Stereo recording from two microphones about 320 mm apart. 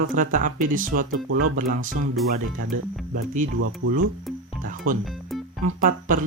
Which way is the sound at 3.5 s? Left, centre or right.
Right.